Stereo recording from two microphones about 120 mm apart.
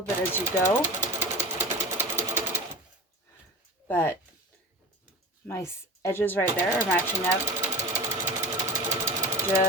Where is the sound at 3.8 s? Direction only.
20° left (ahead or behind).